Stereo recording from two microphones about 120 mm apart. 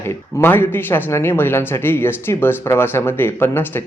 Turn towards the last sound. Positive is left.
turn(degrees=15)  # may be behind; listen again after turning